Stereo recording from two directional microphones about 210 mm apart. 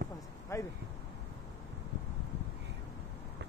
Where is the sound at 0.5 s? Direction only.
15° left (ahead or behind).